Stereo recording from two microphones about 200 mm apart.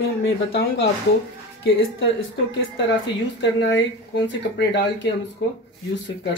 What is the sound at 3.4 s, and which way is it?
Speech, 60° left (ahead or behind).